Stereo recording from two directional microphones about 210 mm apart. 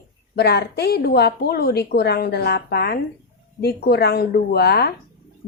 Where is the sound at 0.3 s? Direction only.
50° left (ahead or behind).